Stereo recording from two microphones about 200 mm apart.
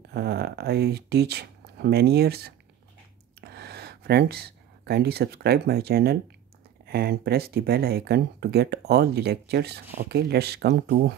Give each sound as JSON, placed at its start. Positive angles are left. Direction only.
{"t": 0.1, "sound": "speech", "side_deg": -55}